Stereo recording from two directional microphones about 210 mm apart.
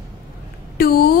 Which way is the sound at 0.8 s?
45° left (ahead or behind).